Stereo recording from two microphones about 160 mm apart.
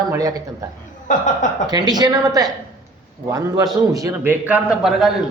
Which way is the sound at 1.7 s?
25° right (ahead or behind).